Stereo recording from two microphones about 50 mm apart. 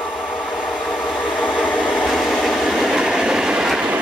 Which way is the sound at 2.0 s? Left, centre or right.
Centre.